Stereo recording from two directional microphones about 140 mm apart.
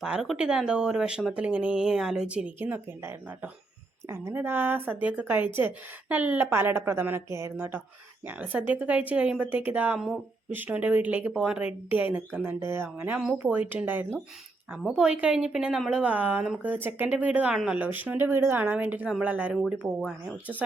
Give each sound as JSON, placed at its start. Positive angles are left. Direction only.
{"t": 0.0, "sound": "speech", "side_deg": -5}